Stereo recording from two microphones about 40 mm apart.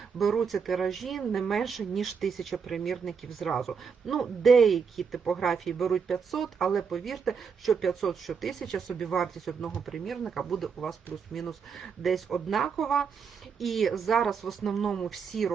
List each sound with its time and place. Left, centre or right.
0.2 s speech: centre
8.9 s speech: left
9.1 s a woman's voice: centre